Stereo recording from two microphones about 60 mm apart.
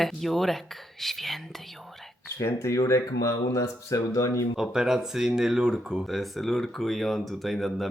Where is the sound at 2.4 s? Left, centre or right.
Left.